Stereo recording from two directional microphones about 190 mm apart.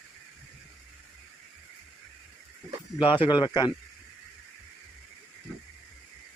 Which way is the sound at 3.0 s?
25° left (ahead or behind).